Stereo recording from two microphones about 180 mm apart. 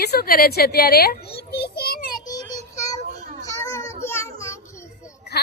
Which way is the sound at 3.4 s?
15° left (ahead or behind).